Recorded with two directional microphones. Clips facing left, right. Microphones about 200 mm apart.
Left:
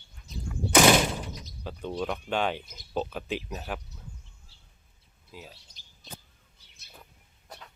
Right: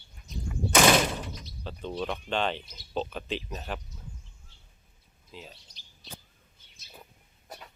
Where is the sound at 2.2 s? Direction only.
10° left (ahead or behind).